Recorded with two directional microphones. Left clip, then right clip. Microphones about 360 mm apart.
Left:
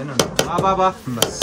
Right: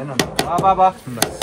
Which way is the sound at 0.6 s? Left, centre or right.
Centre.